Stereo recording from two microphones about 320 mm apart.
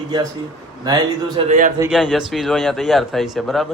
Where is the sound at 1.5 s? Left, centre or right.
Right.